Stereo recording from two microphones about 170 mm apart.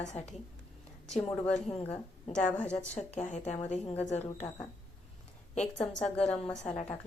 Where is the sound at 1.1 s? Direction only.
5° left (ahead or behind).